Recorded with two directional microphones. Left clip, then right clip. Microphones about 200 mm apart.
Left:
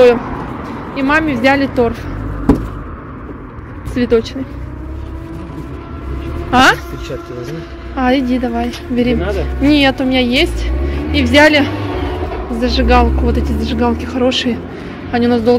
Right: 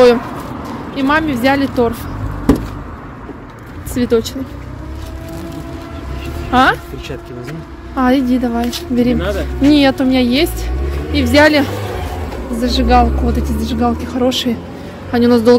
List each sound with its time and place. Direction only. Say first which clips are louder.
0.7 s speech: even; 25° right (ahead or behind)
3.9 s speech: left 1 dB; 15° right (ahead or behind)
6.5 s speech: left 2 dB; 10° right (ahead or behind)
7.9 s a woman's voice: even; 30° right (ahead or behind)
12.5 s speech: even; 15° right (ahead or behind)
15.0 s speech: right 2 dB; 30° right (ahead or behind)